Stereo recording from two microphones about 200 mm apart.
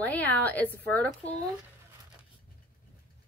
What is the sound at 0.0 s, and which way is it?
Speech, 10° left (ahead or behind).